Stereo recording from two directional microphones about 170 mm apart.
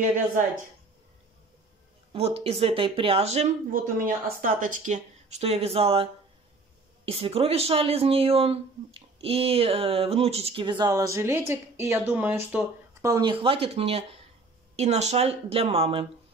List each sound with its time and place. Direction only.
2.1 s speech: 35° right (ahead or behind)
4.0 s speech: 50° right (ahead or behind); by 6.0 s 35° right (ahead or behind)
7.1 s speech: 35° right (ahead or behind); by 13.2 s 15° right (ahead or behind)
13.2 s speech: 30° right (ahead or behind)